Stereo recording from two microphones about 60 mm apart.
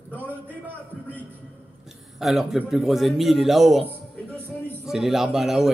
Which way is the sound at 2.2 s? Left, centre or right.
Centre.